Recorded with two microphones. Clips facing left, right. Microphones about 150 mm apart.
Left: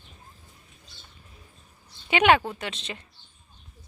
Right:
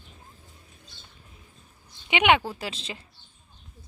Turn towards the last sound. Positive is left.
turn(degrees=-30)  # may be behind; listen again after turning